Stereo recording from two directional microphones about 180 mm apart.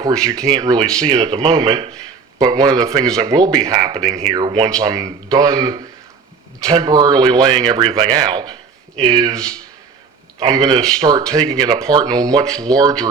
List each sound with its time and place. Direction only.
0.0 s speech: 20° right (ahead or behind)
12.5 s speech: 5° left (ahead or behind)
12.7 s speech: 20° right (ahead or behind)